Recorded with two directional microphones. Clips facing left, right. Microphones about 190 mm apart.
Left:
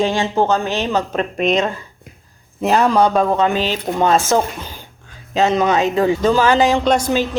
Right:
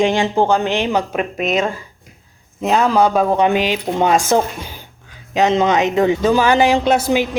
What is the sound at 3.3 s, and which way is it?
Speech, 15° right (ahead or behind).